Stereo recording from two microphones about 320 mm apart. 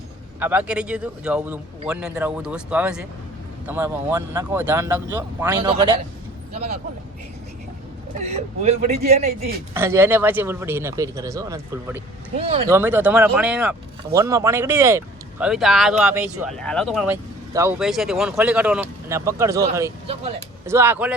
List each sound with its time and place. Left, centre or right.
0.3 s speech: centre
8.2 s a man's voice: right
9.7 s speech: centre
12.4 s a man's voice: centre
12.7 s speech: centre